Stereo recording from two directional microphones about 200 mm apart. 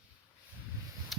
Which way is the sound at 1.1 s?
Centre (ahead or behind).